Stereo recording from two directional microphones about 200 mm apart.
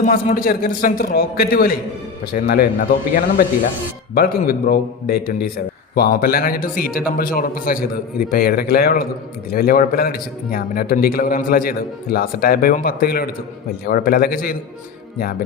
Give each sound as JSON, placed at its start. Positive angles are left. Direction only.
{"t": 0.0, "sound": "a man's voice", "side_deg": 45}